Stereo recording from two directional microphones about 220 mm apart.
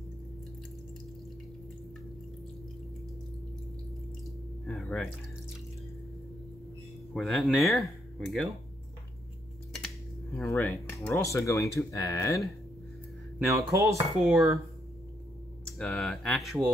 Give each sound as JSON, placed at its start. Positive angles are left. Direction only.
{"t": 4.6, "sound": "music", "side_deg": 5}
{"t": 7.2, "sound": "speech", "side_deg": 0}
{"t": 10.3, "sound": "speech", "side_deg": 10}
{"t": 13.5, "sound": "dishes", "side_deg": -15}
{"t": 15.6, "sound": "speech", "side_deg": 5}